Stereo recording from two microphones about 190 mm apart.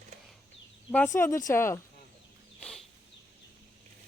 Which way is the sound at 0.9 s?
10° left (ahead or behind).